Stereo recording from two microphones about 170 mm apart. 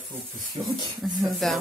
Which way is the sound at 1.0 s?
Centre (ahead or behind).